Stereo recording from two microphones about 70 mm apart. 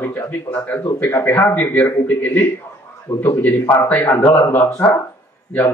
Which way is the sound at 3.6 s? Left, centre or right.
Left.